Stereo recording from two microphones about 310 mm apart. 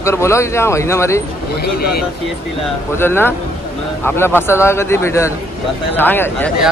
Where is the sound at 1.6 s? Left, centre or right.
Left.